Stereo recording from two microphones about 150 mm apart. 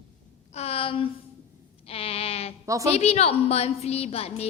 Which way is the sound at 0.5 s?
40° left (ahead or behind).